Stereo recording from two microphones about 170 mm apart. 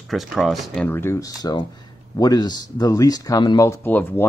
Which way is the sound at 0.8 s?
15° left (ahead or behind).